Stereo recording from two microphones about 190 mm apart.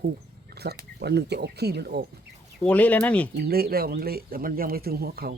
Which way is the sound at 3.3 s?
55° right (ahead or behind).